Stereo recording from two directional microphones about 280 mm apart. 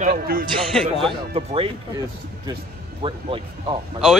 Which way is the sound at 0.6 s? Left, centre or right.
Centre.